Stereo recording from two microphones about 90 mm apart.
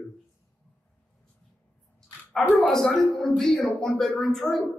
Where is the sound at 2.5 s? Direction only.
10° left (ahead or behind).